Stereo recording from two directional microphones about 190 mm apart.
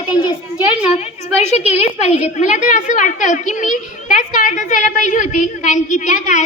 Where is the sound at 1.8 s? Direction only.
35° left (ahead or behind).